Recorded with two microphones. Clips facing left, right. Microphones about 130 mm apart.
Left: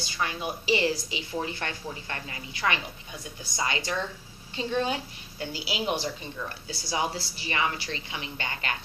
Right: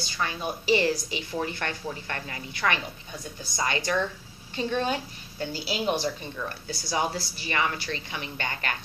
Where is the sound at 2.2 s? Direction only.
45° right (ahead or behind).